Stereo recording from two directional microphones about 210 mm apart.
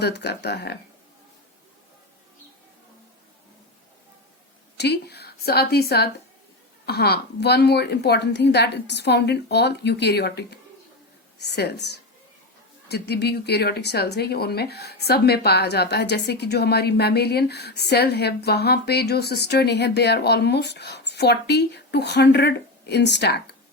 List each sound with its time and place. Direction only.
0.0 s speech: 50° left (ahead or behind)
4.8 s a woman's voice: 50° left (ahead or behind)